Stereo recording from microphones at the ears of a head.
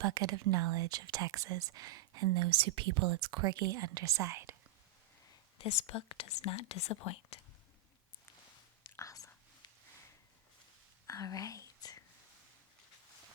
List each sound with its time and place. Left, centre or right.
0.0 s speech: right
5.3 s speech: left
11.0 s whispering: left